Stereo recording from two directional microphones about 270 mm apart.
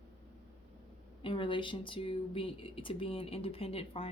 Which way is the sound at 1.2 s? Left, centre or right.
Centre.